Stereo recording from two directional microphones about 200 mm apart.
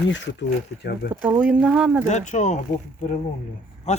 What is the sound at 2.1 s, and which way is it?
Speech, 35° left (ahead or behind).